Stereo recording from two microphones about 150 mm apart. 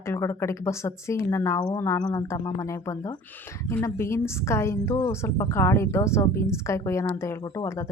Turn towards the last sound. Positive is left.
turn(degrees=20)  # may be behind; listen again after turning